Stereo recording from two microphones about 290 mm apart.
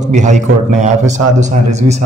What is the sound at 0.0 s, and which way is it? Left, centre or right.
A man's voice, right.